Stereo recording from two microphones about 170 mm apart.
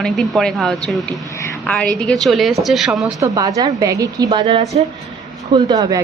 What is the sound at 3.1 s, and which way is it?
A woman's voice, 20° right (ahead or behind).